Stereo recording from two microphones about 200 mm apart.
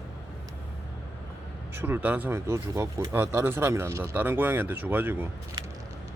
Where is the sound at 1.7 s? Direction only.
10° right (ahead or behind).